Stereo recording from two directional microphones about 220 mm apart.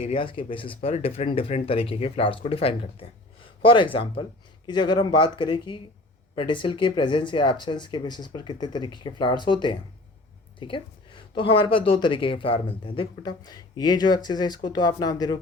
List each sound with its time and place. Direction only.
0.0 s speech: 25° left (ahead or behind)